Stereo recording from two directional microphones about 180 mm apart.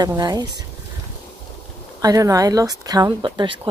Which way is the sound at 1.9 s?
20° right (ahead or behind).